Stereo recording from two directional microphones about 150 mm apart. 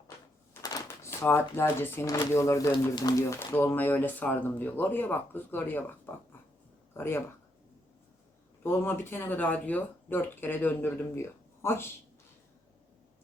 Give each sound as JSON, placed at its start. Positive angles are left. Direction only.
{"t": 0.5, "sound": "a sound", "side_deg": 20}
{"t": 2.1, "sound": "speech", "side_deg": 20}
{"t": 8.6, "sound": "speech", "side_deg": 15}